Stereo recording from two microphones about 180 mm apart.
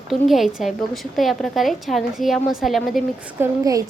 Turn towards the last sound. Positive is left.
turn(degrees=-20)  # may be behind; listen again after turning